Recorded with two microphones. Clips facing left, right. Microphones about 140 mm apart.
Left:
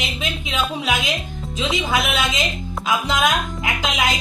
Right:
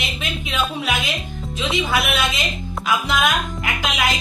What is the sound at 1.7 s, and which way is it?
Speech, 20° left (ahead or behind).